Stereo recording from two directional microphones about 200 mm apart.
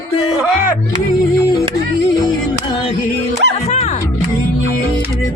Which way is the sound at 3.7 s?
35° left (ahead or behind).